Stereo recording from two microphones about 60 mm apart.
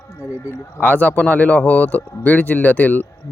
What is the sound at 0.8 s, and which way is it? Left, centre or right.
Speech, left.